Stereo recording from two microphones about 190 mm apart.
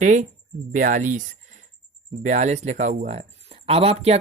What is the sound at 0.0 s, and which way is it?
Speech, 40° right (ahead or behind).